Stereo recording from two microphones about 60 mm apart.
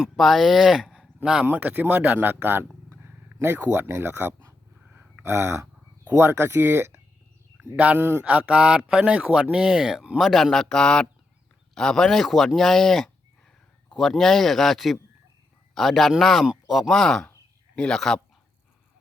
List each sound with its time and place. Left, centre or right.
0.2 s speech: centre
1.5 s speech: right
4.9 s a sound: right
6.1 s speech: right
8.2 s speech: centre
10.2 s a man's voice: centre
16.9 s a man's voice: centre